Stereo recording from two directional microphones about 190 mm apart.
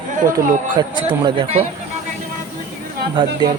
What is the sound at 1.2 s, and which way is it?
Speech, 30° right (ahead or behind).